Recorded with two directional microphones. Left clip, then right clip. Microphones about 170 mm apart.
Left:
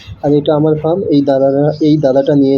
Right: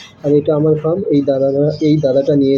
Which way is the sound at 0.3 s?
20° left (ahead or behind).